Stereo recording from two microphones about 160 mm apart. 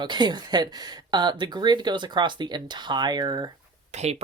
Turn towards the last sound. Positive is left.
turn(degrees=-45)  # may be behind; listen again after turning